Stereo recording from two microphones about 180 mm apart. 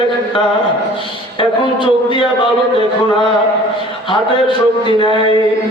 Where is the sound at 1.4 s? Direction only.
25° left (ahead or behind).